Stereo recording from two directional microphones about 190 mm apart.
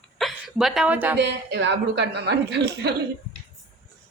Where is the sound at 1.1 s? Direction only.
65° right (ahead or behind).